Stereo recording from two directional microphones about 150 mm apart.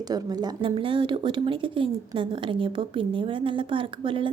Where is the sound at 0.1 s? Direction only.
25° right (ahead or behind).